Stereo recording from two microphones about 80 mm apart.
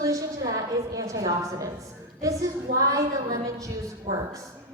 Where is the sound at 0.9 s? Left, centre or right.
Right.